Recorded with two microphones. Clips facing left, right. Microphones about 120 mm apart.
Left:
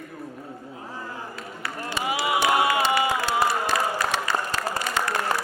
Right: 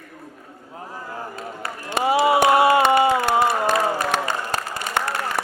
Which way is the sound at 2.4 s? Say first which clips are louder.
Right 4 dB; 30° right (ahead or behind).